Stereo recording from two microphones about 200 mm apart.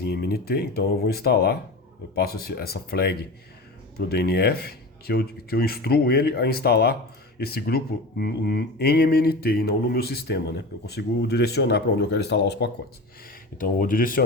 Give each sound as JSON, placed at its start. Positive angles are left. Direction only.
{"t": 0.0, "sound": "speech", "side_deg": 55}
{"t": 13.6, "sound": "speech", "side_deg": 45}